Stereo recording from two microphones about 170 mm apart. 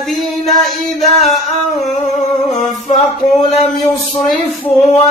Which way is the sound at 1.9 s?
40° left (ahead or behind).